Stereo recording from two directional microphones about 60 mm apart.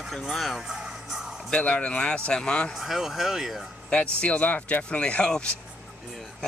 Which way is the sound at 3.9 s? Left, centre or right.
Centre.